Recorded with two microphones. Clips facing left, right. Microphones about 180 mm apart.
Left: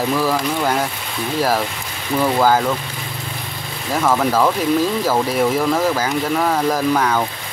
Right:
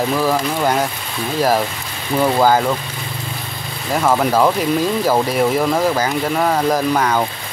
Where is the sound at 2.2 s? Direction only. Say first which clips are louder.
Right 2 dB; 10° right (ahead or behind).